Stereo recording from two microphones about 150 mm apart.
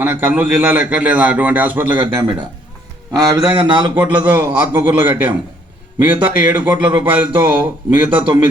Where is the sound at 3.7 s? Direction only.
35° right (ahead or behind).